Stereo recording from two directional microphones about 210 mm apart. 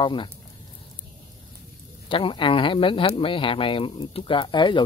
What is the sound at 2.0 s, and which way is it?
Speech, 25° left (ahead or behind).